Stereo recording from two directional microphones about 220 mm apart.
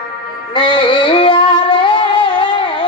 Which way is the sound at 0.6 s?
20° left (ahead or behind).